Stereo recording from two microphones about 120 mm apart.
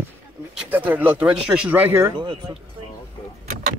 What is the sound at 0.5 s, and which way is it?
Speech, 15° right (ahead or behind).